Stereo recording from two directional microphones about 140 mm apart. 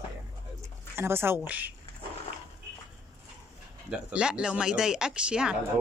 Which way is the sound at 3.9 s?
5° right (ahead or behind).